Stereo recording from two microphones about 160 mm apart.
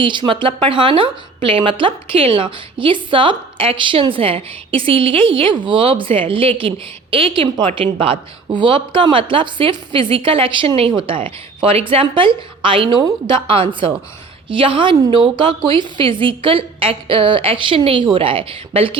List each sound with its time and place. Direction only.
0.0 s a woman's voice: 30° right (ahead or behind)